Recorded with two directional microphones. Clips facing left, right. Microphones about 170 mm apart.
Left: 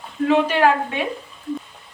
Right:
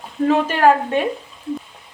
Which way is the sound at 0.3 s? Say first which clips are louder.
Right 2 dB; 40° right (ahead or behind).